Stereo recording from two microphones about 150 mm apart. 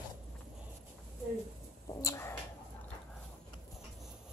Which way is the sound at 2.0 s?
20° left (ahead or behind).